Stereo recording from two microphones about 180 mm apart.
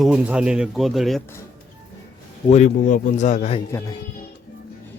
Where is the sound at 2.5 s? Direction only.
40° left (ahead or behind).